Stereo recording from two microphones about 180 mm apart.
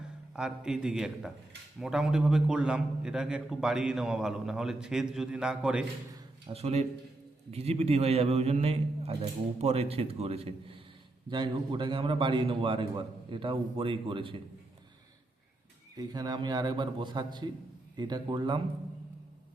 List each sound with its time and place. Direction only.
0.3 s a man's voice: 5° right (ahead or behind)
6.5 s a man's voice: 35° right (ahead or behind)
16.0 s a man's voice: 20° right (ahead or behind)